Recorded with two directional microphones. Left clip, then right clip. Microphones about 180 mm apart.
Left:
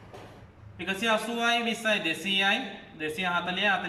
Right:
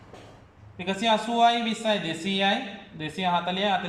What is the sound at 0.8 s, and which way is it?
Speech, 25° right (ahead or behind).